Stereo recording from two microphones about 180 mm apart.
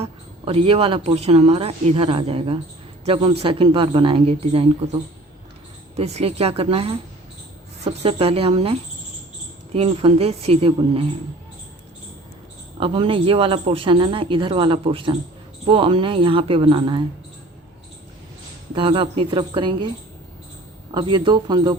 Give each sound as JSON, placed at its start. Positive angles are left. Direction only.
{"t": 0.0, "sound": "speech", "side_deg": -30}
{"t": 6.0, "sound": "speech", "side_deg": -35}
{"t": 8.0, "sound": "speech", "side_deg": -30}
{"t": 12.8, "sound": "speech", "side_deg": -30}
{"t": 18.7, "sound": "speech", "side_deg": -30}
{"t": 20.9, "sound": "speech", "side_deg": -25}